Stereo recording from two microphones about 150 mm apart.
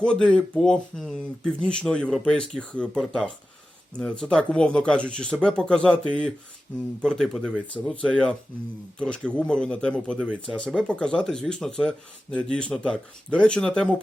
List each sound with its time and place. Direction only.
0.0 s speech: 5° left (ahead or behind)